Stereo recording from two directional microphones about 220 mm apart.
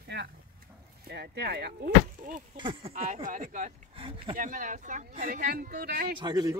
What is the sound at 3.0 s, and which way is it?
Speech, 35° right (ahead or behind).